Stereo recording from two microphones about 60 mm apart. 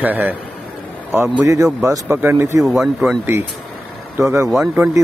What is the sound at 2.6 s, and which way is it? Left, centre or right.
Speech, centre.